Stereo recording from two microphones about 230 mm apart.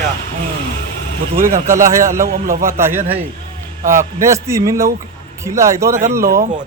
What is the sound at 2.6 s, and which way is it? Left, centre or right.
A man's voice, centre.